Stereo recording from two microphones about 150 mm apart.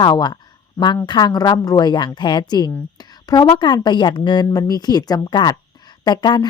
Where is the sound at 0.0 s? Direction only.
30° left (ahead or behind).